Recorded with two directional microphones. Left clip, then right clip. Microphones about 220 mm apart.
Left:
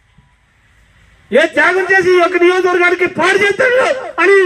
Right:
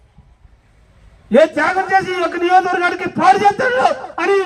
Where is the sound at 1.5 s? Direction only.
15° right (ahead or behind).